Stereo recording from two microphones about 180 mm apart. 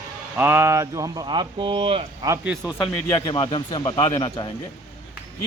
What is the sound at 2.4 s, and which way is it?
Speech, 5° right (ahead or behind).